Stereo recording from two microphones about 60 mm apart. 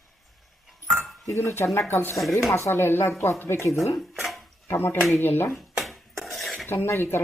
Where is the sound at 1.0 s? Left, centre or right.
Centre.